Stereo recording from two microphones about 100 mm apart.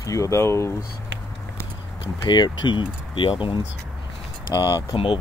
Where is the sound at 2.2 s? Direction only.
45° left (ahead or behind).